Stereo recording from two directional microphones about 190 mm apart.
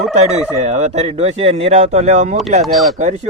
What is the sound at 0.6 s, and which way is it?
Speech, 35° right (ahead or behind).